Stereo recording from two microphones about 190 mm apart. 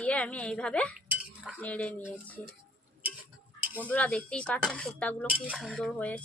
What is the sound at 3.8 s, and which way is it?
Speech, 10° left (ahead or behind).